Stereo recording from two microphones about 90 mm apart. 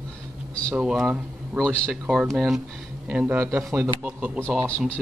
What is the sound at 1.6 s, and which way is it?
Speech, 10° left (ahead or behind).